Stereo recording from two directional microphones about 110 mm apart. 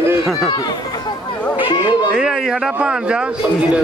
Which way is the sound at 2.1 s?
5° right (ahead or behind).